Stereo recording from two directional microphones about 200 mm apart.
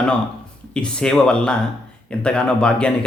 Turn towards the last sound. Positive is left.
turn(degrees=5)  # may be behind; listen again after turning